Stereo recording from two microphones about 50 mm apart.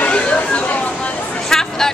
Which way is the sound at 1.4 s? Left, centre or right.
Centre.